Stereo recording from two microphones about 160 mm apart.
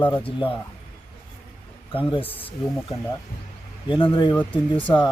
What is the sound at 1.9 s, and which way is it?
Speech, 35° left (ahead or behind).